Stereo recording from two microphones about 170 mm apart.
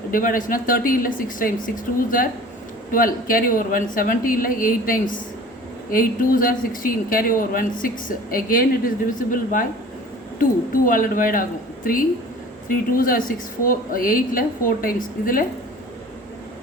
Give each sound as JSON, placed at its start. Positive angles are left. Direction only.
{"t": 0.1, "sound": "speech", "side_deg": 55}